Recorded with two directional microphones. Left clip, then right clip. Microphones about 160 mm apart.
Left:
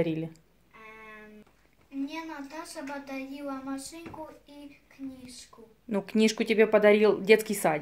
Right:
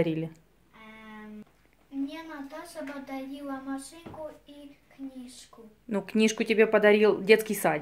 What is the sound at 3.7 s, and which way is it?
Speech, 5° right (ahead or behind).